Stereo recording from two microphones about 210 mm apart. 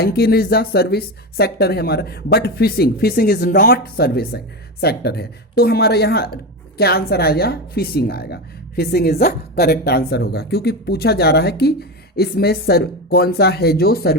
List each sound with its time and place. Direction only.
0.0 s speech: 50° left (ahead or behind)